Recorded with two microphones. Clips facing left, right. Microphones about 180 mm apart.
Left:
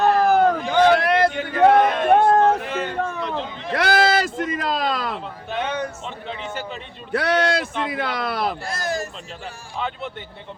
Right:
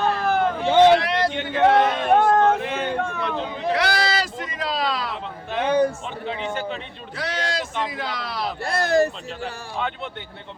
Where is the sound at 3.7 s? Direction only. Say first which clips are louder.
Left 6 dB; 50° left (ahead or behind).